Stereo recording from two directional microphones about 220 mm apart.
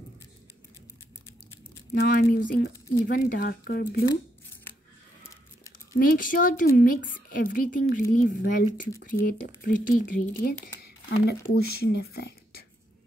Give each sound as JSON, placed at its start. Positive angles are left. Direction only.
{"t": 2.0, "sound": "speech", "side_deg": 40}
{"t": 6.0, "sound": "a woman's voice", "side_deg": 40}